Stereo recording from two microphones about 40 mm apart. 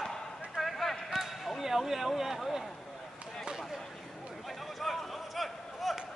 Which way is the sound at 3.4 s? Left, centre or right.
Centre.